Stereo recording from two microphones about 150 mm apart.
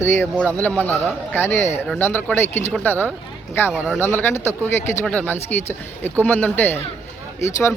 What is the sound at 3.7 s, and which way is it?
Speech, 10° right (ahead or behind).